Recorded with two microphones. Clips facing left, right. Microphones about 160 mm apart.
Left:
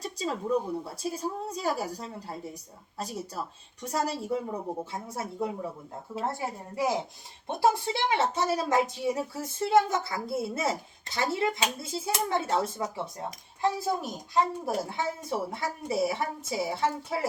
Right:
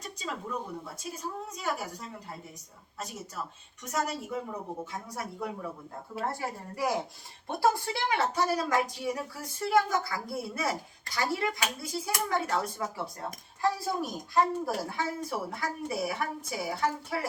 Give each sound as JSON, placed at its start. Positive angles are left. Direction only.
{"t": 0.0, "sound": "a woman's voice", "side_deg": 30}